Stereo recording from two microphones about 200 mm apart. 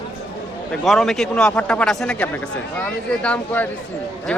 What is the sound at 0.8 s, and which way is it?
A man's voice, centre (ahead or behind).